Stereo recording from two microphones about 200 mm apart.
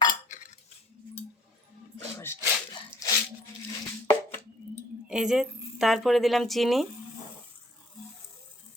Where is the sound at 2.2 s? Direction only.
15° left (ahead or behind).